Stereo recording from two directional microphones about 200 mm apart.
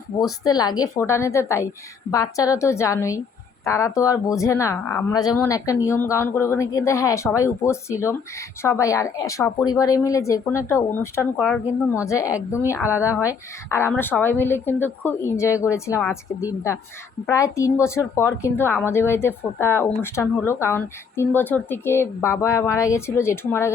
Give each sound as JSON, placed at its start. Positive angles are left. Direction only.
{"t": 0.2, "sound": "speech", "side_deg": 20}
{"t": 11.3, "sound": "speech", "side_deg": 0}
{"t": 12.0, "sound": "speech", "side_deg": 15}
{"t": 13.0, "sound": "speech", "side_deg": -10}
{"t": 13.2, "sound": "speech", "side_deg": 15}